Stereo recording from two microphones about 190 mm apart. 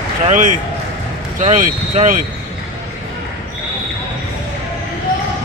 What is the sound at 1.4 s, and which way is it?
Speech, 40° right (ahead or behind).